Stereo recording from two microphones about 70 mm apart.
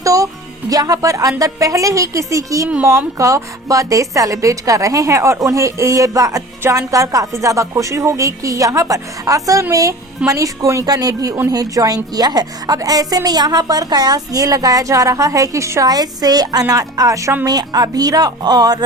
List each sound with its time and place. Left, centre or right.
0.0 s music: right
0.7 s a woman's voice: right
15.9 s a woman's voice: right
17.4 s speech: right